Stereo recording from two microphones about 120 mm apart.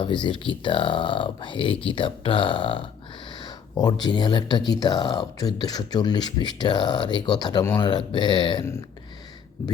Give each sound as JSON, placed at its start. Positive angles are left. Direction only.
{"t": 0.0, "sound": "speech", "side_deg": 45}
{"t": 7.9, "sound": "speech", "side_deg": 40}